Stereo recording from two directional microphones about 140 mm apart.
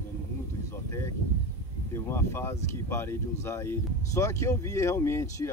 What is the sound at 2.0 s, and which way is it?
Speech, 15° left (ahead or behind).